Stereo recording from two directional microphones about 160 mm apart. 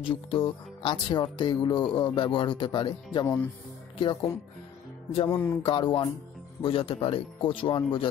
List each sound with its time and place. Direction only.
0.0 s speech: 35° left (ahead or behind)
5.3 s a sound: 15° left (ahead or behind)
5.6 s speech: 30° left (ahead or behind)